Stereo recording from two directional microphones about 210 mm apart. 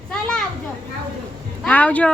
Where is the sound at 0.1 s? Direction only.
5° left (ahead or behind).